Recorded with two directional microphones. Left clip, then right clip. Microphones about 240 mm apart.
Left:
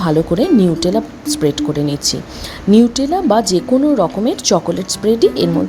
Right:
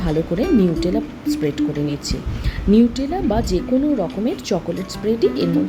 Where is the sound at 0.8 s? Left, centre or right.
Centre.